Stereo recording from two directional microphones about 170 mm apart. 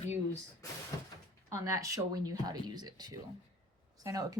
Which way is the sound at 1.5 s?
20° right (ahead or behind).